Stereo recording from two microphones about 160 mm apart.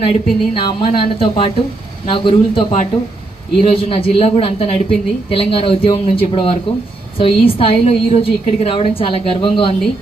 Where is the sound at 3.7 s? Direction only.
35° left (ahead or behind).